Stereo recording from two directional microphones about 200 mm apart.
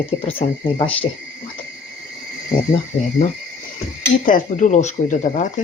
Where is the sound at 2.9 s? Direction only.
30° left (ahead or behind).